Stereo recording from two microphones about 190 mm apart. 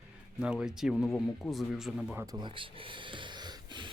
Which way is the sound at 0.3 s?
5° right (ahead or behind).